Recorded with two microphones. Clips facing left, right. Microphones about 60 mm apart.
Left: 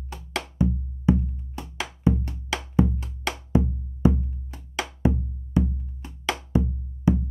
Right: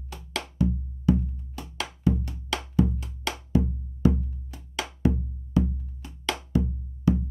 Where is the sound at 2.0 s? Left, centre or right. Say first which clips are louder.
Left 2 dB; left.